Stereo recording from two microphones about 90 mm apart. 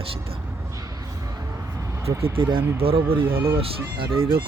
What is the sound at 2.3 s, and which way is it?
Speech, 65° right (ahead or behind).